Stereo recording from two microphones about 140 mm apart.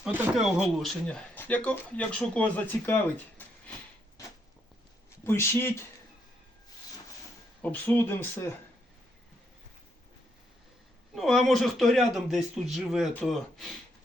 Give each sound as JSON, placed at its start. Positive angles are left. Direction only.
{"t": 0.0, "sound": "speech", "side_deg": -5}
{"t": 5.2, "sound": "speech", "side_deg": 20}
{"t": 7.6, "sound": "speech", "side_deg": 15}
{"t": 11.1, "sound": "speech", "side_deg": 0}